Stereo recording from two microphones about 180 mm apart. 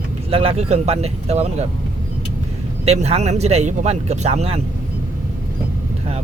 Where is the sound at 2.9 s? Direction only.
35° right (ahead or behind).